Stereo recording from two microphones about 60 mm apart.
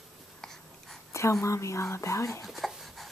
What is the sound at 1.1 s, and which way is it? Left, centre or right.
Speech, left.